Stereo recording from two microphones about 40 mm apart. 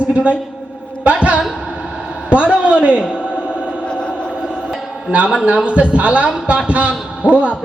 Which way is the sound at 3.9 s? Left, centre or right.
Left.